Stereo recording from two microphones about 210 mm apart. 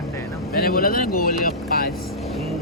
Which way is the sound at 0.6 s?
45° left (ahead or behind).